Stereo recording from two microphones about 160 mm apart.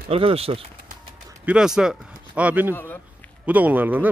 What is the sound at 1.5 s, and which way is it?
A man's voice, 5° right (ahead or behind).